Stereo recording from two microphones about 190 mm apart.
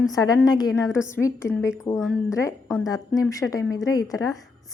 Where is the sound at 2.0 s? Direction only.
5° left (ahead or behind).